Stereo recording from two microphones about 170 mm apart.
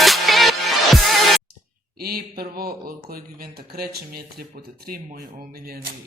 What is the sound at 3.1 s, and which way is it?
Speech, 60° right (ahead or behind).